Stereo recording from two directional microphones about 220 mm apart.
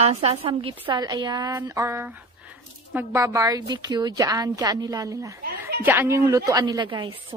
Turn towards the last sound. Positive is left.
turn(degrees=-20)  # may be behind; listen again after turning